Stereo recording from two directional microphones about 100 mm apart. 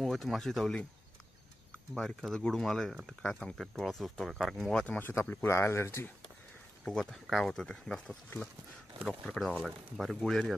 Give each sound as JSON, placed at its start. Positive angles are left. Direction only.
{"t": 0.0, "sound": "speech", "side_deg": 0}
{"t": 2.0, "sound": "speech", "side_deg": 0}
{"t": 4.9, "sound": "speech", "side_deg": 20}
{"t": 6.8, "sound": "speech", "side_deg": 5}